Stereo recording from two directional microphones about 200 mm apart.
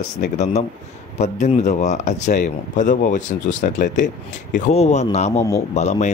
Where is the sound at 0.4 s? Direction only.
35° left (ahead or behind).